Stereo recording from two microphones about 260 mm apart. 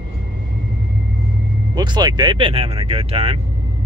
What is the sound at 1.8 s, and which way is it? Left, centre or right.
Speech, centre.